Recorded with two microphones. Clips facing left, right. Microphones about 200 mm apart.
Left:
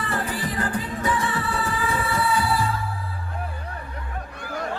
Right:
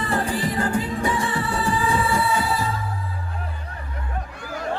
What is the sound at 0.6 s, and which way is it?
Music, 25° right (ahead or behind).